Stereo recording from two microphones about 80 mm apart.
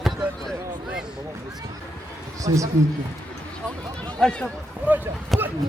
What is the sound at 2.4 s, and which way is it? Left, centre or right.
Speech, right.